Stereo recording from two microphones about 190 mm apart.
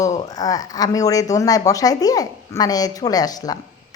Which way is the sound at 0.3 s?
20° left (ahead or behind).